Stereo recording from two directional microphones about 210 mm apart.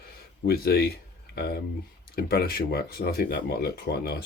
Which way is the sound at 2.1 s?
45° left (ahead or behind).